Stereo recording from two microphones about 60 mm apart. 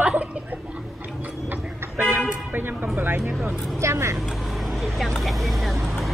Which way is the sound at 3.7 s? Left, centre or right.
Right.